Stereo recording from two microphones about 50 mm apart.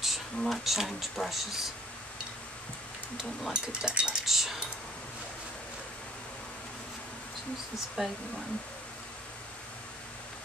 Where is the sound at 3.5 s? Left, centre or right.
Centre.